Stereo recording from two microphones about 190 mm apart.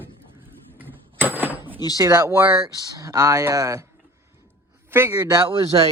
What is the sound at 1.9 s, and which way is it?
A man's voice, 20° right (ahead or behind).